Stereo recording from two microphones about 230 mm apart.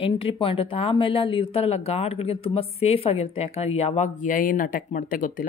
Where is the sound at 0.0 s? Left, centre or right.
Left.